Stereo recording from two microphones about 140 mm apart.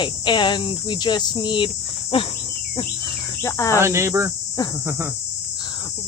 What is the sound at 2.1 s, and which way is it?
Insect, 40° left (ahead or behind).